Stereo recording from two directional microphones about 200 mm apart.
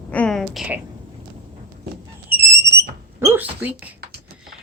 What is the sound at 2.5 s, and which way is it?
Smoke detector, 15° right (ahead or behind).